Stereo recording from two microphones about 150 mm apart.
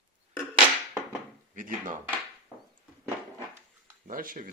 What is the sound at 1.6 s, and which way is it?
Speech, 65° right (ahead or behind).